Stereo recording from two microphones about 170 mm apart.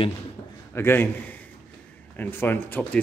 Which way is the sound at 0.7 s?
15° left (ahead or behind).